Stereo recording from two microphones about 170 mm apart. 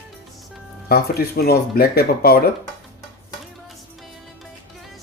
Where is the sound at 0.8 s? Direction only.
65° left (ahead or behind).